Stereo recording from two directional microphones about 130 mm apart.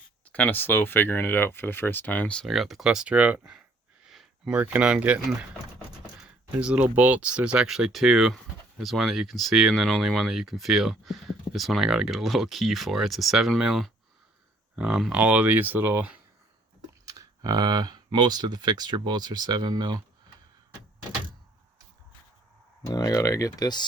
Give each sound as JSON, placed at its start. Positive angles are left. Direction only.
{"t": 0.3, "sound": "speech", "side_deg": 10}
{"t": 4.0, "sound": "a sound", "side_deg": -5}
{"t": 4.5, "sound": "speech", "side_deg": -15}
{"t": 6.1, "sound": "computer keyboard", "side_deg": -5}
{"t": 6.9, "sound": "speech", "side_deg": -10}
{"t": 17.1, "sound": "speech", "side_deg": -30}
{"t": 22.9, "sound": "speech", "side_deg": 30}